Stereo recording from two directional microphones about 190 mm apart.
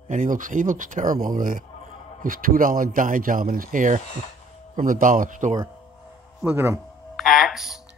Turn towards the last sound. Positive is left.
turn(degrees=0)  # may be behind; listen again after turning